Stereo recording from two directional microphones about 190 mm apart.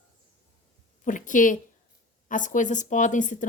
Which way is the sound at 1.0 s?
45° left (ahead or behind).